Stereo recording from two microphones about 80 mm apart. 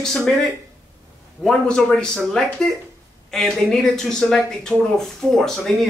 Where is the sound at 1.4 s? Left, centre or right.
Centre.